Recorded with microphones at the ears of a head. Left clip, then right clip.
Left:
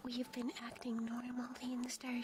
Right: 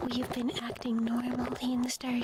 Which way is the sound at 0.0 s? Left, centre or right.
Right.